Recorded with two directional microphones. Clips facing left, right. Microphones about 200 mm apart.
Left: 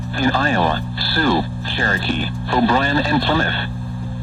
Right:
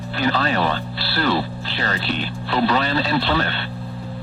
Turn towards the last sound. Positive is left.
turn(degrees=45)  # may be behind; listen again after turning